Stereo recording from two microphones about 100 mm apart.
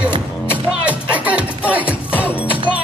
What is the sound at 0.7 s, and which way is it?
Music, 15° right (ahead or behind).